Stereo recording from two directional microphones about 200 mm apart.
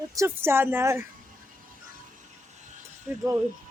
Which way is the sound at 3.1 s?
10° right (ahead or behind).